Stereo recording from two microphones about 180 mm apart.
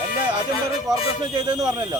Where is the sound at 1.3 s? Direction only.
25° right (ahead or behind).